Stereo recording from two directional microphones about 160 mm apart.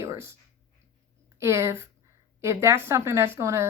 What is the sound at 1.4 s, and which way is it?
Speech, 15° right (ahead or behind).